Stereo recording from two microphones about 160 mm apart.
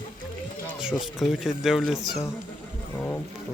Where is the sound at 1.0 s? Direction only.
Centre (ahead or behind).